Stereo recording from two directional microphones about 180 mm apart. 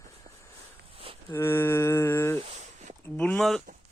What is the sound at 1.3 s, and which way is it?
Speech, 15° left (ahead or behind).